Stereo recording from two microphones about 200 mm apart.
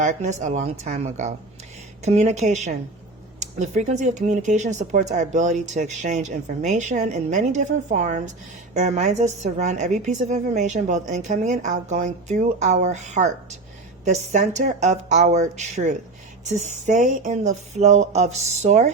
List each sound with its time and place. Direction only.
0.0 s a woman's voice: 35° right (ahead or behind)